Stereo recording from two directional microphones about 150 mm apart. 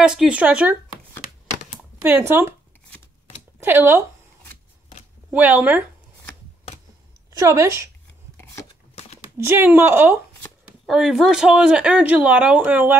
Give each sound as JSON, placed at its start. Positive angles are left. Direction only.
{"t": 0.0, "sound": "speech", "side_deg": -5}
{"t": 1.8, "sound": "speech", "side_deg": -15}
{"t": 3.6, "sound": "speech", "side_deg": -15}
{"t": 5.3, "sound": "speech", "side_deg": -10}
{"t": 7.3, "sound": "a woman's voice", "side_deg": -20}
{"t": 9.4, "sound": "speech", "side_deg": -15}
{"t": 10.9, "sound": "speech", "side_deg": -5}